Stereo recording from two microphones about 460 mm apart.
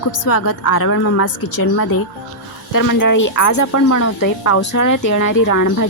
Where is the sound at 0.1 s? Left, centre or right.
Left.